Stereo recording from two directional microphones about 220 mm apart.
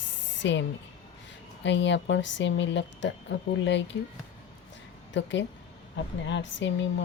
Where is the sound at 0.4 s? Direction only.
55° left (ahead or behind).